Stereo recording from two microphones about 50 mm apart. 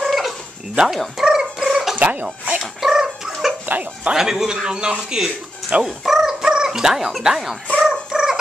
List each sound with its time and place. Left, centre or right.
0.0 s fowl: centre
0.8 s dog: centre
2.0 s speech: right
2.6 s cat: centre
3.6 s speech: right
4.1 s speech: centre
7.8 s cat: centre